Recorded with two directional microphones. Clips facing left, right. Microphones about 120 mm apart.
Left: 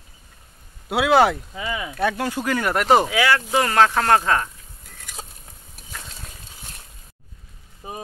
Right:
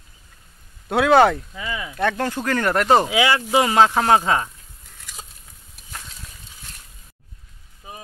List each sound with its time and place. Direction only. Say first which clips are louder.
0.8 s speech: right 2 dB; 5° left (ahead or behind)
1.5 s speech: left 2 dB; 15° left (ahead or behind)
3.1 s speech: right 1 dB; 20° right (ahead or behind)